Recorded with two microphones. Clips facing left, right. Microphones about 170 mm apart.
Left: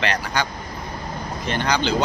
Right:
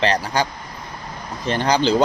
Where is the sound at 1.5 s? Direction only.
35° right (ahead or behind).